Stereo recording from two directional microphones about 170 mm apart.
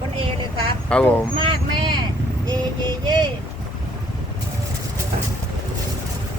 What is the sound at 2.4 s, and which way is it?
Female singing, 25° right (ahead or behind).